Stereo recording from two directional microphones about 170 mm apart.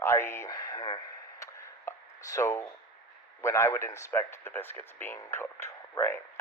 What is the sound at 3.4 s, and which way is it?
Speech, 15° left (ahead or behind).